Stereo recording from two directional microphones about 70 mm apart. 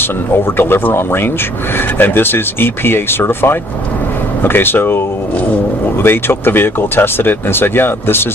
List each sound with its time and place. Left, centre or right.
0.0 s speech: left